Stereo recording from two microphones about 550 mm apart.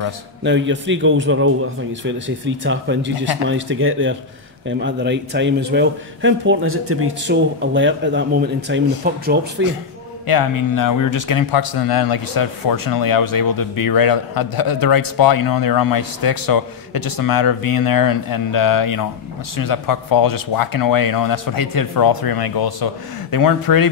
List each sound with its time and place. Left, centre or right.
0.4 s speech: centre
10.2 s speech: left